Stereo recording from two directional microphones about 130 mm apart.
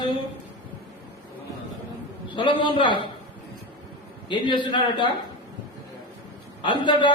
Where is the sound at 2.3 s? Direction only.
40° left (ahead or behind).